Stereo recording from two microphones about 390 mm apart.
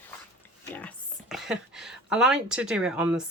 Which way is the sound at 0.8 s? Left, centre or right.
Centre.